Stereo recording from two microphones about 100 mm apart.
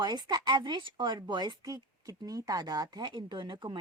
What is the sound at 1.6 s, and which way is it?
Speech, 35° right (ahead or behind).